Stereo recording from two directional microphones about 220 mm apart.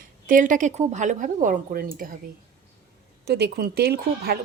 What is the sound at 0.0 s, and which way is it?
A woman's voice, 40° right (ahead or behind).